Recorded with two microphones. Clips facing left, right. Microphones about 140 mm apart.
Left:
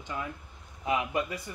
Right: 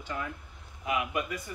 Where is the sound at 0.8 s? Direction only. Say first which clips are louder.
Left 2 dB; 30° left (ahead or behind).